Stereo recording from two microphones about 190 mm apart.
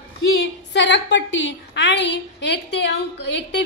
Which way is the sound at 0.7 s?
70° left (ahead or behind).